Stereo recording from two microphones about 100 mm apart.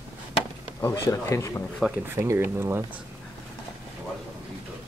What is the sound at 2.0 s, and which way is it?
Speech, 25° right (ahead or behind).